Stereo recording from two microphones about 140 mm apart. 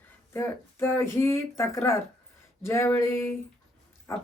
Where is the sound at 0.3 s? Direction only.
15° left (ahead or behind).